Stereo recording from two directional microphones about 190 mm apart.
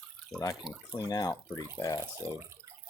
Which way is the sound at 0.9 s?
20° left (ahead or behind).